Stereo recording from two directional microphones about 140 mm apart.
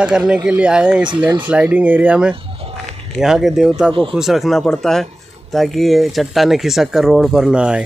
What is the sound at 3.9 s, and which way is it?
Speech, 35° right (ahead or behind).